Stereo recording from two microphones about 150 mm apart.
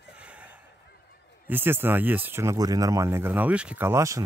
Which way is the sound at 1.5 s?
15° right (ahead or behind).